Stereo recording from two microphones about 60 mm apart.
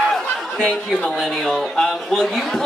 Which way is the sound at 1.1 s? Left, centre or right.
Centre.